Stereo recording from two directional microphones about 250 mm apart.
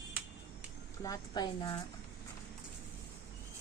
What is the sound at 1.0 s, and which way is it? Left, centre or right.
Speech, centre.